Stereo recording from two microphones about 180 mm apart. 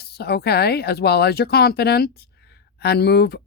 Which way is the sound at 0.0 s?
65° left (ahead or behind).